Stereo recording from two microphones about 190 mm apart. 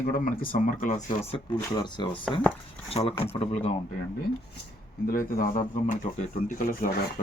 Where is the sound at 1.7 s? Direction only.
25° left (ahead or behind).